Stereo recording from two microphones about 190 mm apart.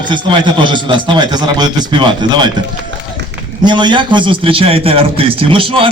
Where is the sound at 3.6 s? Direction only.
25° right (ahead or behind).